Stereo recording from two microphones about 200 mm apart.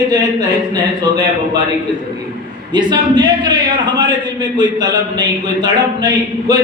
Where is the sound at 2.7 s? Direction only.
20° right (ahead or behind).